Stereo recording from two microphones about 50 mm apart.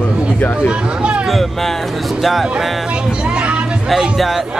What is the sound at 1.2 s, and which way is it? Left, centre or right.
Speech, centre.